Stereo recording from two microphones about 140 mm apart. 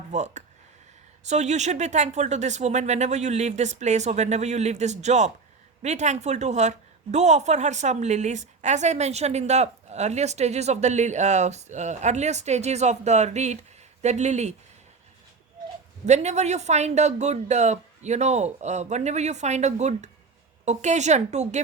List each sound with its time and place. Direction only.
0.1 s a woman's voice: 55° right (ahead or behind)
16.0 s speech: 55° right (ahead or behind)